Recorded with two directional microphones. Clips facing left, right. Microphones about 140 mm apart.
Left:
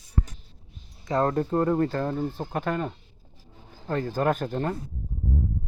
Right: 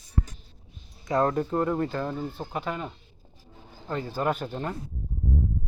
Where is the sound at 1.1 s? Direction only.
35° left (ahead or behind).